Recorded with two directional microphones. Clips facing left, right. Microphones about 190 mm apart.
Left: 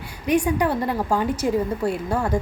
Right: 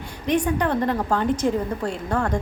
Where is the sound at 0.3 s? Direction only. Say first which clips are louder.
Left 1 dB; 10° left (ahead or behind).